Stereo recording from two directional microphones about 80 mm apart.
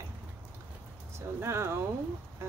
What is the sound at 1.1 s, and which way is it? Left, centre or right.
Speech, right.